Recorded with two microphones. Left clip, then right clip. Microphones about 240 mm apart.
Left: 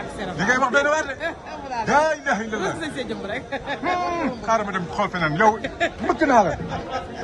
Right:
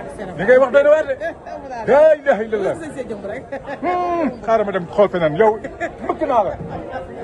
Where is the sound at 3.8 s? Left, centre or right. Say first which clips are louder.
Right 5 dB; centre.